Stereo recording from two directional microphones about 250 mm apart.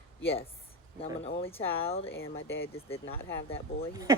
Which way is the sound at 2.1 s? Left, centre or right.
Left.